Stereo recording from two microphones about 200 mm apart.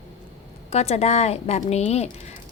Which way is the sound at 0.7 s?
30° left (ahead or behind).